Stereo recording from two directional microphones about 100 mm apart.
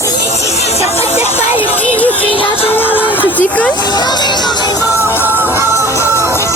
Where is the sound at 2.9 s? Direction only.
15° right (ahead or behind).